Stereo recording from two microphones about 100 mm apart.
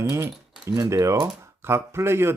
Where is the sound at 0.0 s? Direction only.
30° right (ahead or behind).